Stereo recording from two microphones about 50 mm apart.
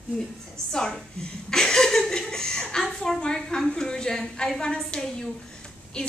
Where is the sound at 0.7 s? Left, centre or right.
Centre.